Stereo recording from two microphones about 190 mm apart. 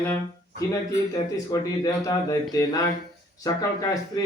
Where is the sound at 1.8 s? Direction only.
20° left (ahead or behind).